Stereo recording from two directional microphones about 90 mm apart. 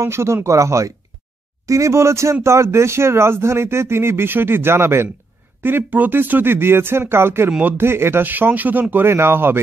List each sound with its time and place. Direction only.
0.0 s speech: 30° right (ahead or behind)